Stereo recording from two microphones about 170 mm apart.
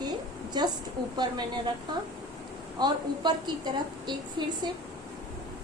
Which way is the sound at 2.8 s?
25° right (ahead or behind).